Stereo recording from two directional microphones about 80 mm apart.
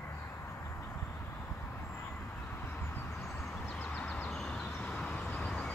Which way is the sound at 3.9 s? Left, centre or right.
Centre.